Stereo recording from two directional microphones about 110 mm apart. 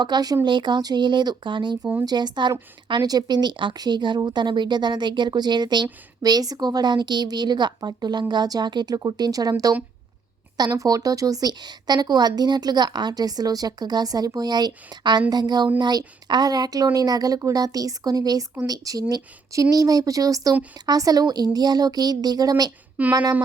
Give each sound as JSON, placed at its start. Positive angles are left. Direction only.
{"t": 0.0, "sound": "a woman's voice", "side_deg": -40}
{"t": 10.8, "sound": "a woman's voice", "side_deg": -35}
{"t": 23.0, "sound": "speech", "side_deg": -15}